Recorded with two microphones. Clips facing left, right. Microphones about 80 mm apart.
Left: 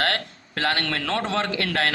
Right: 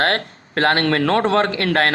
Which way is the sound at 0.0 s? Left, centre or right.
Right.